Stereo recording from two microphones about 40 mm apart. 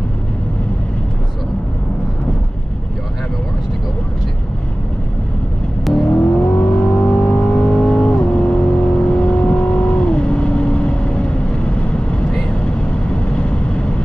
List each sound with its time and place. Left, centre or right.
5.9 s vehicle: centre
6.4 s vehicle: left